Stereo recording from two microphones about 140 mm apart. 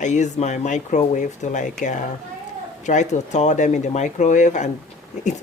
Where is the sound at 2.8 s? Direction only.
60° left (ahead or behind).